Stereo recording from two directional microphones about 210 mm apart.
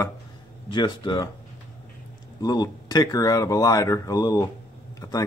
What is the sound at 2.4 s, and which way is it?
Speech, 20° left (ahead or behind).